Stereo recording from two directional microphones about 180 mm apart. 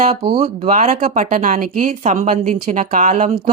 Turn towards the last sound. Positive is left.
turn(degrees=-45)  # may be behind; listen again after turning